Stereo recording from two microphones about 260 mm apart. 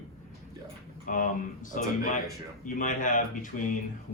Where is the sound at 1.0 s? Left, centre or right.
Left.